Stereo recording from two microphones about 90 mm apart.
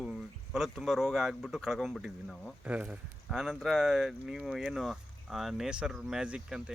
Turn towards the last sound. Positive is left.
turn(degrees=-10)  # may be behind; listen again after turning